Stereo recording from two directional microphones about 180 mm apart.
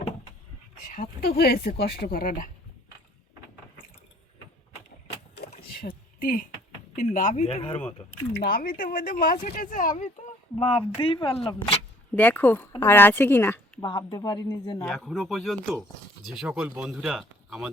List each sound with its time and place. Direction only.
0.9 s speech: 55° left (ahead or behind)
6.1 s speech: 50° left (ahead or behind)
8.3 s speech: 60° left (ahead or behind)
10.6 s speech: 30° left (ahead or behind)
12.1 s speech: 10° left (ahead or behind)
13.8 s speech: 25° left (ahead or behind)
14.8 s speech: 5° left (ahead or behind)